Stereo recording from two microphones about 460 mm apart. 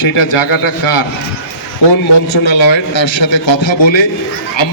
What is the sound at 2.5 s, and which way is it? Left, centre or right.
A man's voice, left.